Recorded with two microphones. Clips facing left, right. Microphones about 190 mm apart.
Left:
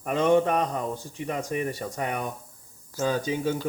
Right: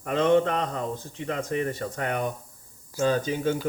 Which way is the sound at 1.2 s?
15° left (ahead or behind).